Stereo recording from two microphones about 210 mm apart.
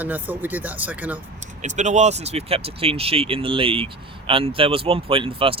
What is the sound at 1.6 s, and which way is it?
Speech, 35° right (ahead or behind).